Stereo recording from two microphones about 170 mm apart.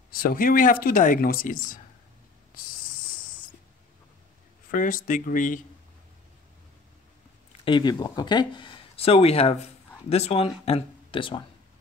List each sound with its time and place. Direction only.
0.1 s speech: 55° left (ahead or behind)
4.6 s speech: 50° left (ahead or behind)
7.6 s speech: 25° left (ahead or behind)